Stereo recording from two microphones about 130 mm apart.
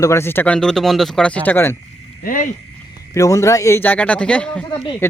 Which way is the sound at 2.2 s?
90° left.